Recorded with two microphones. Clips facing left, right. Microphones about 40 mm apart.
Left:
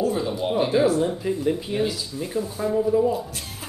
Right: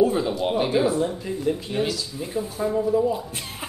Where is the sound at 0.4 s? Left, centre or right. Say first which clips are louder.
Left 3 dB; centre.